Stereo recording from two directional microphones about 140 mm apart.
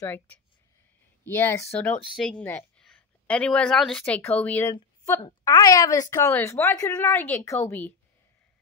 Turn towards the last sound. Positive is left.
turn(degrees=15)  # may be behind; listen again after turning